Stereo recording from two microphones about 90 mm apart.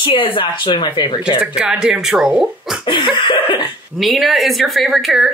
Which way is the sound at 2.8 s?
60° left (ahead or behind).